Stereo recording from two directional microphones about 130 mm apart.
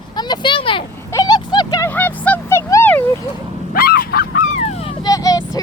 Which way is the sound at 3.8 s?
90° left.